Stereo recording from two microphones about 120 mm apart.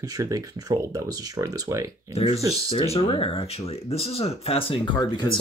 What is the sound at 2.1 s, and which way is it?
Speech, 60° left (ahead or behind).